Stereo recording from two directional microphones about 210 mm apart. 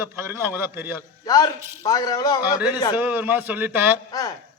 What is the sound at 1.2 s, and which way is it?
A man's voice, 20° left (ahead or behind).